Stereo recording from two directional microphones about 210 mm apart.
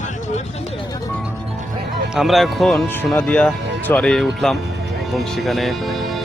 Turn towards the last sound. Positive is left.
turn(degrees=0)  # may be behind; listen again after turning